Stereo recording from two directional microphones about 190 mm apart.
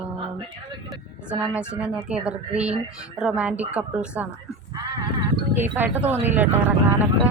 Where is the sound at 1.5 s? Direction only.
5° right (ahead or behind).